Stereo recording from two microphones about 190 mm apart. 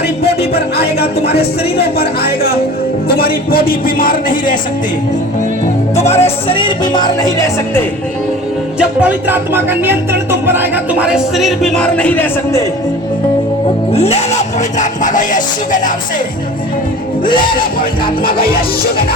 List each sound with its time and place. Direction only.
1.8 s music: 55° left (ahead or behind)
6.0 s music: 35° left (ahead or behind); by 7.5 s 20° left (ahead or behind)
8.8 s music: 5° right (ahead or behind); by 12.6 s 10° left (ahead or behind)
13.9 s speech: 35° left (ahead or behind)
17.2 s music: 25° left (ahead or behind)